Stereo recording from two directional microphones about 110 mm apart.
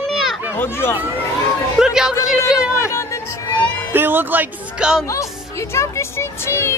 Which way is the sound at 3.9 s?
20° right (ahead or behind).